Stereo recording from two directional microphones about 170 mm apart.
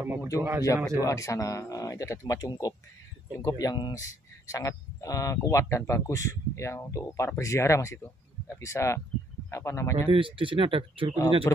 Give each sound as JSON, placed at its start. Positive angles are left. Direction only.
{"t": 0.0, "sound": "speech", "side_deg": -15}
{"t": 1.0, "sound": "speech", "side_deg": 20}
{"t": 9.9, "sound": "speech", "side_deg": -30}
{"t": 11.5, "sound": "speech", "side_deg": 15}